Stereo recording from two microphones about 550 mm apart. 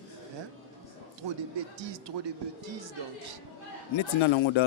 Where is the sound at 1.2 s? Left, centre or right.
Right.